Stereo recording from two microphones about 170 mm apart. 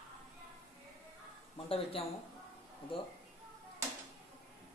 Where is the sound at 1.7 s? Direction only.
35° left (ahead or behind).